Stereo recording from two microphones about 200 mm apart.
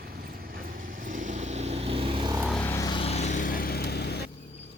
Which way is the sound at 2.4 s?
5° left (ahead or behind).